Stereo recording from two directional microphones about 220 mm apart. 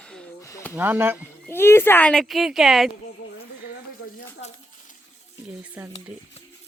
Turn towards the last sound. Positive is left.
turn(degrees=-5)  # may be behind; listen again after turning